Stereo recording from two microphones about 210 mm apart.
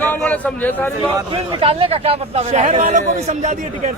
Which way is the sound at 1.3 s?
25° right (ahead or behind).